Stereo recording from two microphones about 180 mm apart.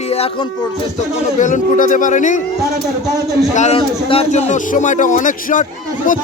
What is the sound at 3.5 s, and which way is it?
A man's voice, 40° left (ahead or behind).